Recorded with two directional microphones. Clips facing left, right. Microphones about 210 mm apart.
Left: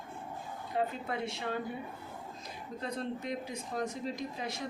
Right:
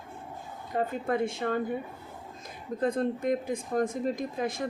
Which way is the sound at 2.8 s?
50° right (ahead or behind).